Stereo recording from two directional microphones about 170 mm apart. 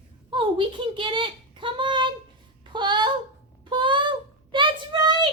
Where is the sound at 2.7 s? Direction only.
25° right (ahead or behind).